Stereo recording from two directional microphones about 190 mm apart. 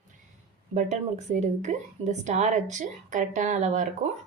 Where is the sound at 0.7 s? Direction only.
40° right (ahead or behind).